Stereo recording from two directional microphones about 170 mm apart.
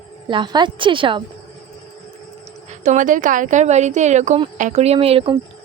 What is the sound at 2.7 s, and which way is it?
Speech, 45° right (ahead or behind).